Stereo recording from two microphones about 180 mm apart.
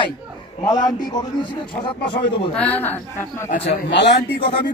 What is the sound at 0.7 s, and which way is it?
A man's voice, 20° left (ahead or behind).